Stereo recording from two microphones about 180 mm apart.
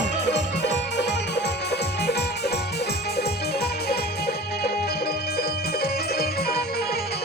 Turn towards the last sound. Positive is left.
turn(degrees=60)  # may be behind; listen again after turning